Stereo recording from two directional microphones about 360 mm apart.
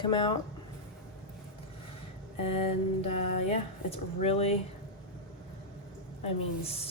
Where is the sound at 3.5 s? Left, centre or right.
Centre.